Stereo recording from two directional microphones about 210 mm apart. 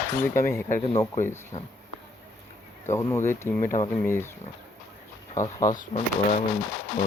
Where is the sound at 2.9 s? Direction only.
10° left (ahead or behind).